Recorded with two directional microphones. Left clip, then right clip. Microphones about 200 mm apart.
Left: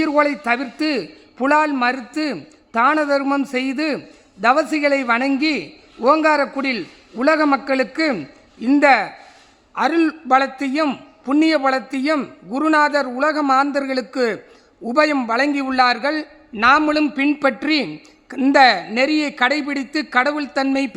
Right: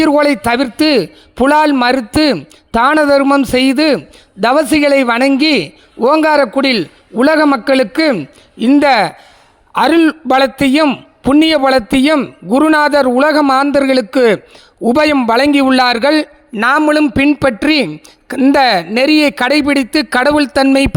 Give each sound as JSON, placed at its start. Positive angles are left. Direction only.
{"t": 0.0, "sound": "a man's voice", "side_deg": -45}